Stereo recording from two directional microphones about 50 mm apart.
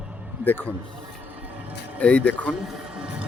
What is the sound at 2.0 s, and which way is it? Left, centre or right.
Speech, left.